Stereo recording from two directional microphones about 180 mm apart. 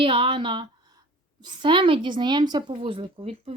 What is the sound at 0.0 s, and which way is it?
A woman's voice, 30° right (ahead or behind).